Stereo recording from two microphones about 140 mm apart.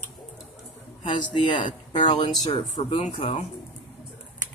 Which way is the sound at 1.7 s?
35° left (ahead or behind).